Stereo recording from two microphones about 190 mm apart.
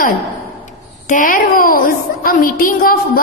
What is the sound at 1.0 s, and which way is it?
A woman's voice, 45° left (ahead or behind).